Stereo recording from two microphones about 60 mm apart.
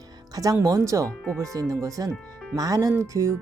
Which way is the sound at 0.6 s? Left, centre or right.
Right.